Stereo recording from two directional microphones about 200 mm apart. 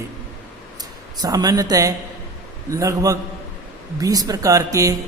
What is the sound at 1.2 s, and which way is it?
A man's voice, 20° right (ahead or behind).